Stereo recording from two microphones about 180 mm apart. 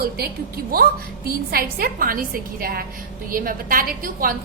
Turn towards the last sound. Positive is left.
turn(degrees=-50)  # may be behind; listen again after turning